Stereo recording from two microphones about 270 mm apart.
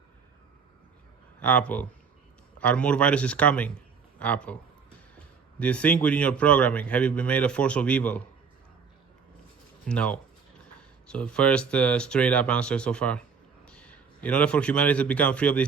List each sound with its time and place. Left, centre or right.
1.4 s a man's voice: centre
5.5 s a man's voice: centre
9.8 s a man's voice: centre